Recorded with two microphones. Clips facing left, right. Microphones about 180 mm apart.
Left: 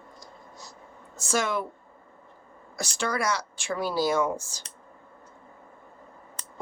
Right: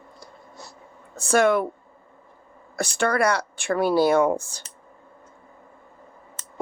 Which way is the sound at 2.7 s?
60° right (ahead or behind).